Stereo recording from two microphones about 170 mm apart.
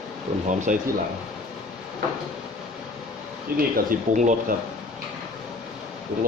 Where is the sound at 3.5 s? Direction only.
50° right (ahead or behind).